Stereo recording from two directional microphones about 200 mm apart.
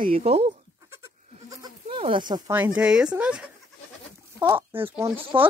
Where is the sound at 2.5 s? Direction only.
5° right (ahead or behind).